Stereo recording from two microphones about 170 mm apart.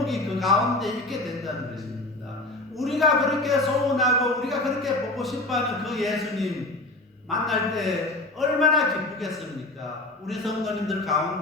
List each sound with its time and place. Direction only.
0.0 s speech: centre (ahead or behind)
2.7 s speech: centre (ahead or behind)